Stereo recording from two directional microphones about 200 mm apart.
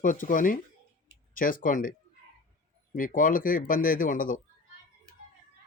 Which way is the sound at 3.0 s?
45° left (ahead or behind).